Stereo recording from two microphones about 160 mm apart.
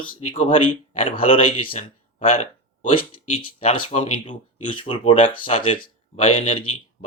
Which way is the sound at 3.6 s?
45° left (ahead or behind).